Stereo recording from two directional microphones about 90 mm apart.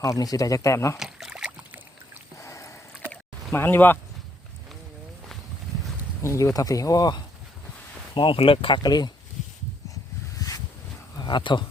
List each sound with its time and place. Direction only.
0.0 s speech: 40° left (ahead or behind)
0.9 s a sound: 5° right (ahead or behind)
2.4 s rowboat: 35° left (ahead or behind)
3.5 s speech: 25° left (ahead or behind)
6.2 s speech: 35° left (ahead or behind)
8.1 s speech: 70° left (ahead or behind)
8.8 s speech: 50° left (ahead or behind)
9.9 s a sound: 40° left (ahead or behind)
11.2 s speech: 60° left (ahead or behind)